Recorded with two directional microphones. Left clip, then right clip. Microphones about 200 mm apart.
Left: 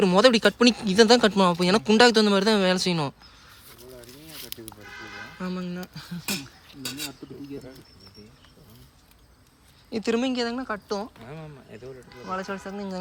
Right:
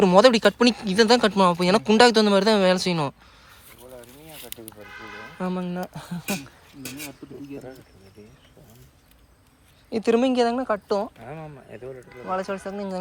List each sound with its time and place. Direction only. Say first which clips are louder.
0.0 s speech: right 3 dB; 10° left (ahead or behind)
5.4 s a woman's voice: right 7 dB; centre (ahead or behind)
6.8 s speech: left 3 dB; 10° left (ahead or behind)
9.9 s a woman's voice: right 5 dB; 10° left (ahead or behind)
11.2 s speech: right 4 dB; 25° right (ahead or behind)
12.3 s speech: right 4 dB; 10° left (ahead or behind)